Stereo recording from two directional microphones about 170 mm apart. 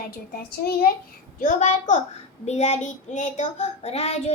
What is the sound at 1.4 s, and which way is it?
A child's voice, 45° left (ahead or behind).